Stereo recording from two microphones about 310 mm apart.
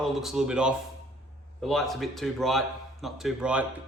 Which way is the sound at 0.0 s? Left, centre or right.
Centre.